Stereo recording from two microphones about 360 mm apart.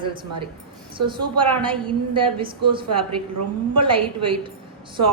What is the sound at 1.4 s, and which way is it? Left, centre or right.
A woman's voice, centre.